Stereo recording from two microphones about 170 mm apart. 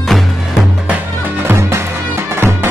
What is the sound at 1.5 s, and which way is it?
Music, 15° right (ahead or behind).